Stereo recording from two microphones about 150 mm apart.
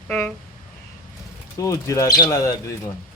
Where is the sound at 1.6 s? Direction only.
20° left (ahead or behind).